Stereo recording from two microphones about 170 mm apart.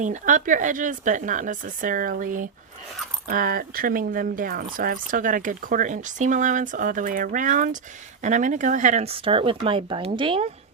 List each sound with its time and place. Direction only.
0.0 s speech: 45° right (ahead or behind); by 10.5 s 30° right (ahead or behind)